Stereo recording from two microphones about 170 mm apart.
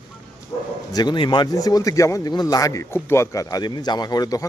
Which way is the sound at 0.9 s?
25° left (ahead or behind).